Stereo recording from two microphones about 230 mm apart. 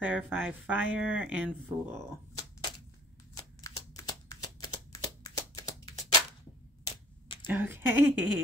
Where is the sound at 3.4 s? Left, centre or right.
Centre.